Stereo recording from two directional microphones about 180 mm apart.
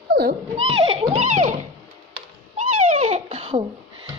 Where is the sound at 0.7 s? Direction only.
30° right (ahead or behind).